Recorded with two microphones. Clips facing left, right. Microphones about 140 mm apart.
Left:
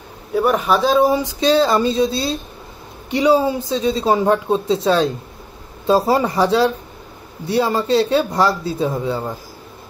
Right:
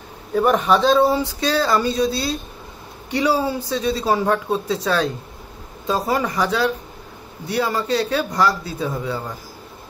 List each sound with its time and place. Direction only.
0.3 s speech: centre (ahead or behind); by 9.2 s 25° left (ahead or behind)